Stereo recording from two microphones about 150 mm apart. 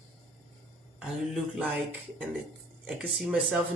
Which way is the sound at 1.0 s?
5° right (ahead or behind).